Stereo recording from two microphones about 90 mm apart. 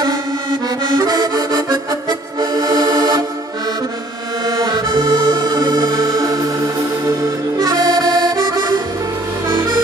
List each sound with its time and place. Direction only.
0.7 s accordion: 50° right (ahead or behind)
4.9 s music: 60° right (ahead or behind); by 6.4 s 40° right (ahead or behind)
7.5 s music: 45° right (ahead or behind)